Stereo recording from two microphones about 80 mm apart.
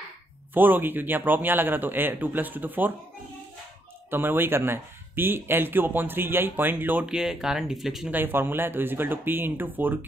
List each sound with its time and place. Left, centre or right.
0.6 s speech: right
4.1 s speech: right
7.1 s speech: centre
8.1 s speech: right